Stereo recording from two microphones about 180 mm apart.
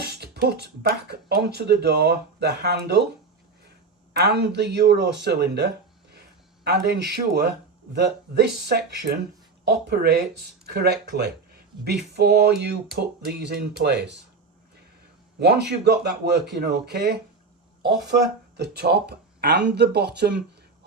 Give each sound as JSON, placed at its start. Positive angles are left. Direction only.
{"t": 0.0, "sound": "speech", "side_deg": -65}
{"t": 4.1, "sound": "speech", "side_deg": -65}
{"t": 15.4, "sound": "speech", "side_deg": -65}